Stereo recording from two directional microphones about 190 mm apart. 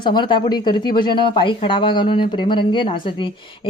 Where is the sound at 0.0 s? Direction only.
25° left (ahead or behind).